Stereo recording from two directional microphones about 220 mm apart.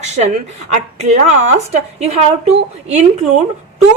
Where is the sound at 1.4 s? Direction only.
30° right (ahead or behind).